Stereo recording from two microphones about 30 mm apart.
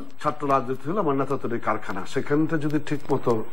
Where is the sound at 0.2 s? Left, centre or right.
Centre.